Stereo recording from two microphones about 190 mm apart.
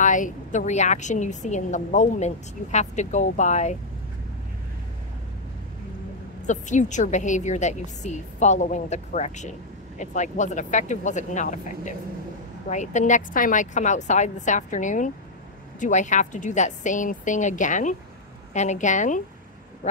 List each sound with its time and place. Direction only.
0.0 s a woman's voice: 40° left (ahead or behind)
6.4 s a woman's voice: 40° left (ahead or behind)